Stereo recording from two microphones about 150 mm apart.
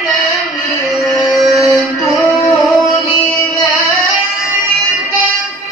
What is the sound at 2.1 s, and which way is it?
Music, 20° left (ahead or behind).